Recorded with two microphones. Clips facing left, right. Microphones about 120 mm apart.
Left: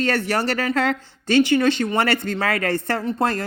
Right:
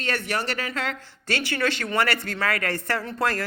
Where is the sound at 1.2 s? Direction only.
20° left (ahead or behind).